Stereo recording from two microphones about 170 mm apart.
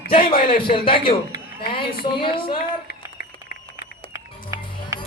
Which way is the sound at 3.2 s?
60° left (ahead or behind).